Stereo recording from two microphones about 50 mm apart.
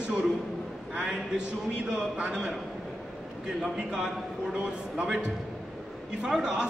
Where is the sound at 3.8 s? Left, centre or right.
Centre.